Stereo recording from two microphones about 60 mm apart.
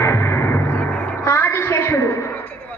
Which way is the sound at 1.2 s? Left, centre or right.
Left.